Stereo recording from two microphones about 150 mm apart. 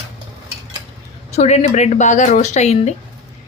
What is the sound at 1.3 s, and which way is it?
Speech, 45° left (ahead or behind).